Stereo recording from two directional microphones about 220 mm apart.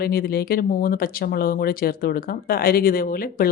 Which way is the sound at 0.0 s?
45° left (ahead or behind).